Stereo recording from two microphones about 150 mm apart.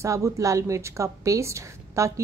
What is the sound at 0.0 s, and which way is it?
A woman's voice, 20° right (ahead or behind).